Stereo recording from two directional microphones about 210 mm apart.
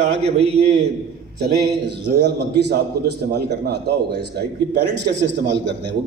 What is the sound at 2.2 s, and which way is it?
A man's voice, 50° right (ahead or behind).